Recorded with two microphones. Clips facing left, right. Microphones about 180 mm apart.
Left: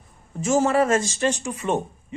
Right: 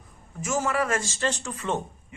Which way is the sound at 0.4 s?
30° left (ahead or behind).